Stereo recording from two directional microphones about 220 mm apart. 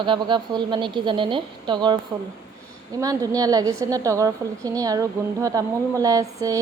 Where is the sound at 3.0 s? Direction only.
15° right (ahead or behind).